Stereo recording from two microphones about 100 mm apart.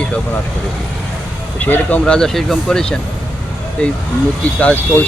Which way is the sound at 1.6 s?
15° left (ahead or behind).